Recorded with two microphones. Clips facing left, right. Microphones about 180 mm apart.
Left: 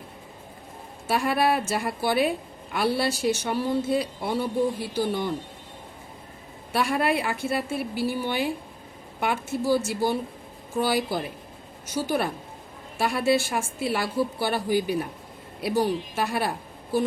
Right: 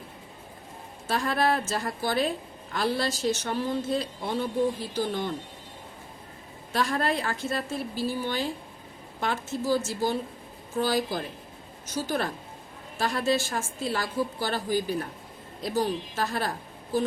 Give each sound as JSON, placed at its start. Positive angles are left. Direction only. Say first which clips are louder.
{"t": 1.0, "sound": "speech", "louder": "left 3 dB", "side_deg": 10}
{"t": 6.7, "sound": "speech", "louder": "left 3 dB", "side_deg": 10}